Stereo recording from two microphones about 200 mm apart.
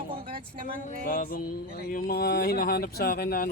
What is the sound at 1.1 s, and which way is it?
Speech, 45° left (ahead or behind).